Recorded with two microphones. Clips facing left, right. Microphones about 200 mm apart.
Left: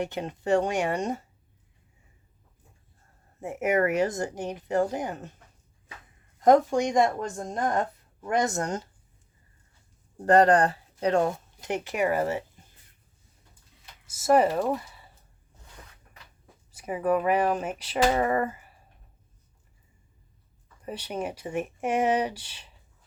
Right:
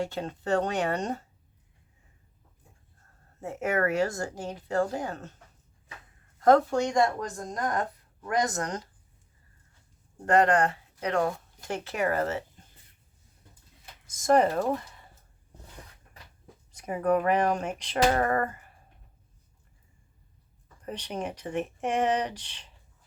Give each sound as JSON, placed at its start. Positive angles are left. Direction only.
{"t": 0.0, "sound": "speech", "side_deg": 15}
{"t": 3.4, "sound": "speech", "side_deg": 15}
{"t": 6.4, "sound": "a woman's voice", "side_deg": 15}
{"t": 10.2, "sound": "speech", "side_deg": 35}
{"t": 14.1, "sound": "speech", "side_deg": 5}
{"t": 16.7, "sound": "speech", "side_deg": 5}
{"t": 20.8, "sound": "speech", "side_deg": 10}